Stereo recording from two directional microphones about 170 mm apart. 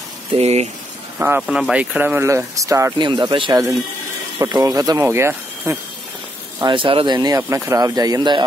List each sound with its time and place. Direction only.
0.3 s speech: 40° right (ahead or behind)
1.4 s speech: centre (ahead or behind)
6.6 s speech: 30° right (ahead or behind)